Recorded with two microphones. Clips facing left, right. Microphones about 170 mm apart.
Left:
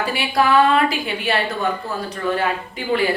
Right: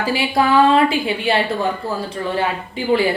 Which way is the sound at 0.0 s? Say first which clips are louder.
Right 2 dB; 25° right (ahead or behind).